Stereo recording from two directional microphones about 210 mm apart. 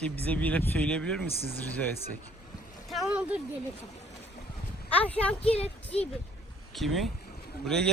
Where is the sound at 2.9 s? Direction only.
5° right (ahead or behind).